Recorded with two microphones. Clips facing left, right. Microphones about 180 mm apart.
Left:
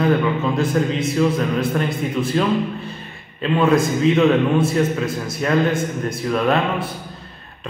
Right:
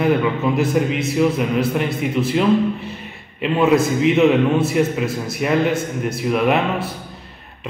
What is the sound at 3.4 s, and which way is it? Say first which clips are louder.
A man's voice: right 1 dB; 15° right (ahead or behind).